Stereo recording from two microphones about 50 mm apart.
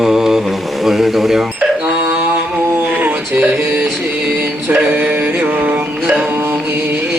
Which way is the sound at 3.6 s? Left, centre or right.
Right.